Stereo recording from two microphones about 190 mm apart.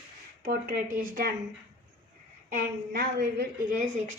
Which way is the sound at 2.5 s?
50° right (ahead or behind).